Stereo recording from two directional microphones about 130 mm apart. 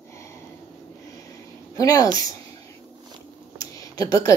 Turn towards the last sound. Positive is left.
turn(degrees=30)  # may be behind; listen again after turning